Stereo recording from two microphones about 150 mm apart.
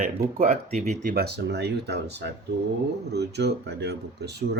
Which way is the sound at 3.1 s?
90° right.